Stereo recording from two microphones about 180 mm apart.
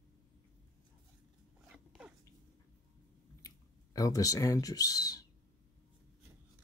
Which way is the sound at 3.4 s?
20° left (ahead or behind).